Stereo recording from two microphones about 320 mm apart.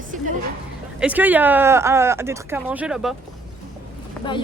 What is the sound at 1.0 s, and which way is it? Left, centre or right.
Speech, centre.